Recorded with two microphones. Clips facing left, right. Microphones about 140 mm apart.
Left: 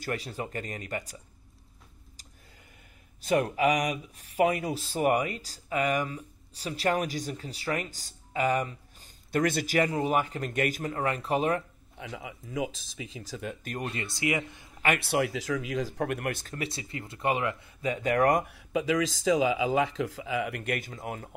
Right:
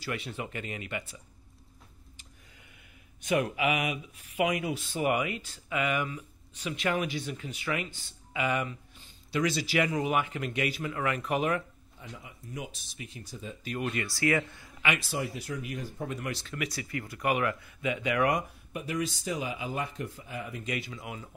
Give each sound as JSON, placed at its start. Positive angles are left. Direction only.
{"t": 0.0, "sound": "speech", "side_deg": 40}
{"t": 3.2, "sound": "speech", "side_deg": 35}
{"t": 12.0, "sound": "speech", "side_deg": 90}
{"t": 13.2, "sound": "speech", "side_deg": 80}
{"t": 13.8, "sound": "speech", "side_deg": 25}
{"t": 15.0, "sound": "speech", "side_deg": 70}
{"t": 16.5, "sound": "speech", "side_deg": 25}
{"t": 17.8, "sound": "speech", "side_deg": 40}
{"t": 18.5, "sound": "speech", "side_deg": 90}